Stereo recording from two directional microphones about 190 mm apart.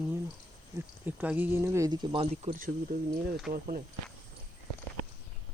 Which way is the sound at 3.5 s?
45° right (ahead or behind).